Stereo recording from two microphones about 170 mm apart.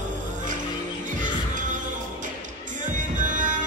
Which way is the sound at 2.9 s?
50° right (ahead or behind).